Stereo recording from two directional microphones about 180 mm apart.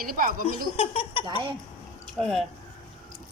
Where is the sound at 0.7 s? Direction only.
30° left (ahead or behind).